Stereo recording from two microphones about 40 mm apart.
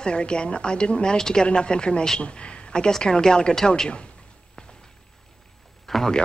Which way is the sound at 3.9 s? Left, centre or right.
Left.